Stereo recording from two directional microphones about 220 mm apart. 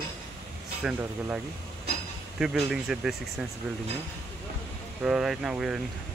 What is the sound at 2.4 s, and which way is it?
Speech, 5° right (ahead or behind).